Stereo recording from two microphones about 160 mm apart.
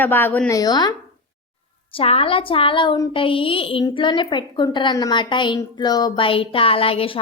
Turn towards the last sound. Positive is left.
turn(degrees=35)  # may be behind; listen again after turning